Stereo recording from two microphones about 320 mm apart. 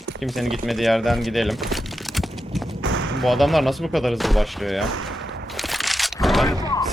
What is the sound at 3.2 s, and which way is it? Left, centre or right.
Speech, centre.